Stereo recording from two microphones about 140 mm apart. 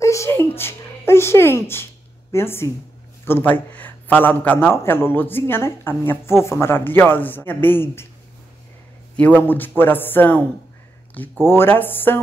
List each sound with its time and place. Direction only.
0.0 s a man's voice: 20° left (ahead or behind)
9.1 s a man's voice: 10° left (ahead or behind)
11.4 s a man's voice: 15° left (ahead or behind)